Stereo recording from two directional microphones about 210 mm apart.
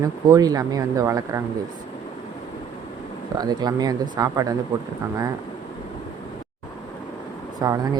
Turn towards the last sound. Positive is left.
turn(degrees=-15)  # may be behind; listen again after turning